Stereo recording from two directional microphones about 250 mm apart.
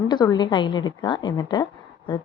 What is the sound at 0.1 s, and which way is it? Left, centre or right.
A woman's voice, centre.